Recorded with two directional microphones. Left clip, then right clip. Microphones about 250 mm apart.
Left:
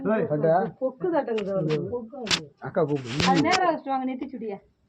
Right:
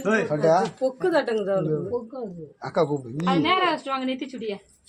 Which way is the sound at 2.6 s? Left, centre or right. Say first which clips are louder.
Right 7 dB; centre.